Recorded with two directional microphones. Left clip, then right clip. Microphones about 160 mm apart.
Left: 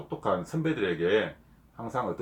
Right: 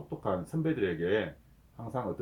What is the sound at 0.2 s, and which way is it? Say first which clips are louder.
Speech: left 4 dB; 20° right (ahead or behind).